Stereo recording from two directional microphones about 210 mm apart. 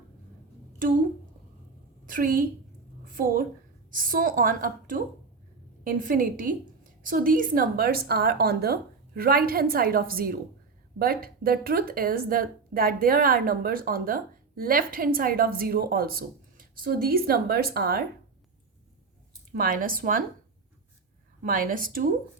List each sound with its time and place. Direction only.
2.0 s a woman's voice: 40° right (ahead or behind)
3.0 s a sound: 40° right (ahead or behind)
3.9 s a woman's voice: 40° right (ahead or behind)
19.5 s a woman's voice: 40° right (ahead or behind)
21.4 s a woman's voice: 40° right (ahead or behind)